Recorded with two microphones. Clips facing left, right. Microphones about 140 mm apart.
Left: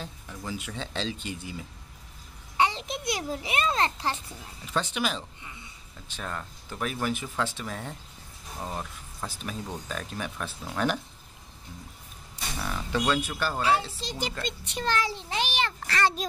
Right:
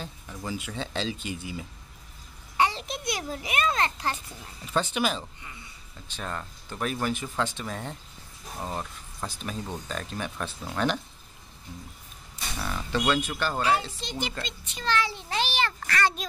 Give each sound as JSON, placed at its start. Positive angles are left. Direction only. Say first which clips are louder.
{"t": 0.3, "sound": "speech", "louder": "right 2 dB", "side_deg": -5}
{"t": 2.5, "sound": "a child's voice", "louder": "even", "side_deg": 20}
{"t": 4.7, "sound": "speech", "louder": "right 2 dB", "side_deg": 0}
{"t": 12.5, "sound": "speech", "louder": "even", "side_deg": 5}
{"t": 13.6, "sound": "a child's voice", "louder": "even", "side_deg": 25}
{"t": 14.4, "sound": "a child's voice", "louder": "left 5 dB", "side_deg": 65}
{"t": 14.9, "sound": "a child's voice", "louder": "right 1 dB", "side_deg": 40}
{"t": 15.2, "sound": "a child's voice", "louder": "right 1 dB", "side_deg": 15}